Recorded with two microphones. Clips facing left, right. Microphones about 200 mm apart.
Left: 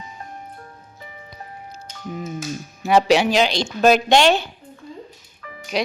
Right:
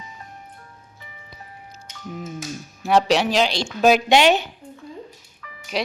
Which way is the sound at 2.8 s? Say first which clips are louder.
Left 2 dB; centre (ahead or behind).